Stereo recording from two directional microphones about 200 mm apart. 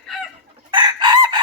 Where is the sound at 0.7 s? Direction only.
20° right (ahead or behind).